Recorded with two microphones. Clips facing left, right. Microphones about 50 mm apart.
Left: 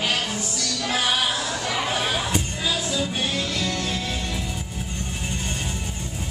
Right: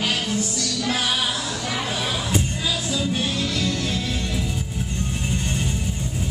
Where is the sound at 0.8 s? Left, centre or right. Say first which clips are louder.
Left 1 dB; centre.